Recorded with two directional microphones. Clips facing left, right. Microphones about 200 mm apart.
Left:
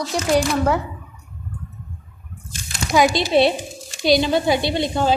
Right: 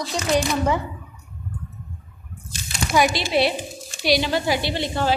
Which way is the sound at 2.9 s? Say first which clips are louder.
Left 4 dB; 15° left (ahead or behind).